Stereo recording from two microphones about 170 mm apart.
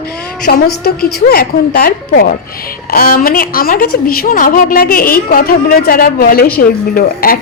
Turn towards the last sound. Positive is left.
turn(degrees=60)  # may be behind; listen again after turning